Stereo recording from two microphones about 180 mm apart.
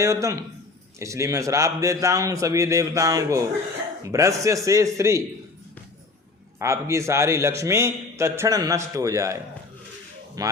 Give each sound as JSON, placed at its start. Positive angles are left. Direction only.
{"t": 0.0, "sound": "a man's voice", "side_deg": -15}
{"t": 6.6, "sound": "a man's voice", "side_deg": -15}